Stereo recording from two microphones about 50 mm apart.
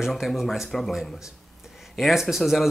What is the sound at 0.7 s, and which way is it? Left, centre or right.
Speech, centre.